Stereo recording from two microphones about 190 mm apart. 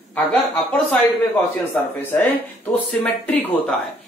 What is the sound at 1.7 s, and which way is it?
Speech, 10° left (ahead or behind).